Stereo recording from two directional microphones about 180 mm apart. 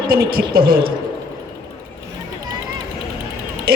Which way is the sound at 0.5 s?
55° right (ahead or behind).